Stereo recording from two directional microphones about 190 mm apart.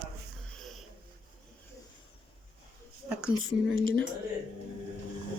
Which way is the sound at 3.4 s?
90° right.